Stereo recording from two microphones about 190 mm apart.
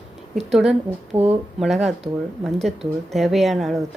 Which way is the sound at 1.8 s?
Centre (ahead or behind).